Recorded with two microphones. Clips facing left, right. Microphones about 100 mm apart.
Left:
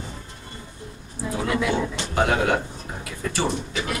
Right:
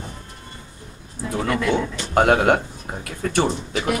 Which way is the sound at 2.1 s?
55° right (ahead or behind).